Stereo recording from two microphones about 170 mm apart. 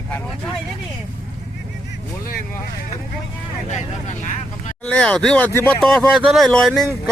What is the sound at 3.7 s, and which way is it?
Speech, 40° left (ahead or behind).